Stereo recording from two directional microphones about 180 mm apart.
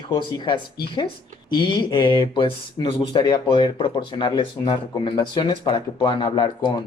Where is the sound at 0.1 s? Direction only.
25° left (ahead or behind).